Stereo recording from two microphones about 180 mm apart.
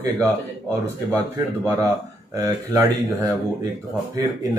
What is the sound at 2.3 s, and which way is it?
Speech, 20° right (ahead or behind).